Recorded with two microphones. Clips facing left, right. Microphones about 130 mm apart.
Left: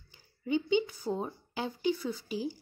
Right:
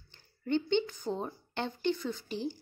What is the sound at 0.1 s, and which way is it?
A woman's voice, 5° left (ahead or behind).